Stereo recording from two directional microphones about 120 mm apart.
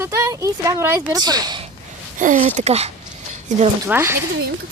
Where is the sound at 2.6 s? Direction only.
60° right (ahead or behind).